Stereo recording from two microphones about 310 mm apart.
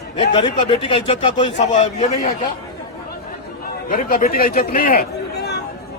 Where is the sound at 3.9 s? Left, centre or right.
Left.